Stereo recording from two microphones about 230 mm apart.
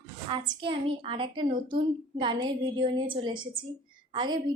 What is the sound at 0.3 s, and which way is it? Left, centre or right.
A woman's voice, right.